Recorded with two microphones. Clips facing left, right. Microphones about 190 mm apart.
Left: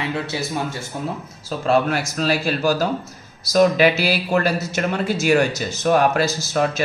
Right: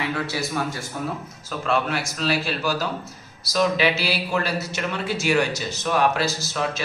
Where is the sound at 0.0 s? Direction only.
25° left (ahead or behind).